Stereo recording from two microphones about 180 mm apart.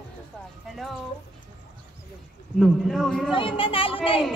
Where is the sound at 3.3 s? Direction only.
30° left (ahead or behind).